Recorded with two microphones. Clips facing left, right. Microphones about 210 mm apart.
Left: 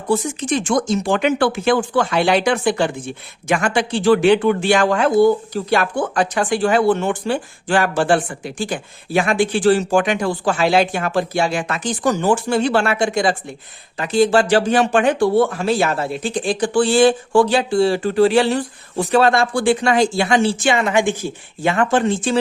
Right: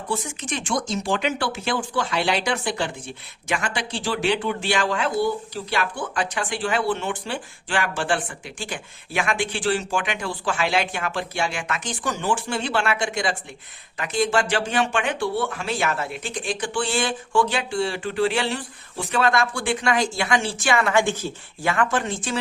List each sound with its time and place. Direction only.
0.1 s speech: 40° left (ahead or behind)
0.7 s speech: 50° left (ahead or behind); by 22.4 s 30° left (ahead or behind)